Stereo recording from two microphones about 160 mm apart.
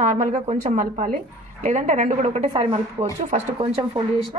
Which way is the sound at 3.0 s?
30° right (ahead or behind).